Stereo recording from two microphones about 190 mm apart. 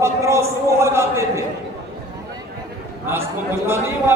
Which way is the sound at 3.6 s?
15° right (ahead or behind).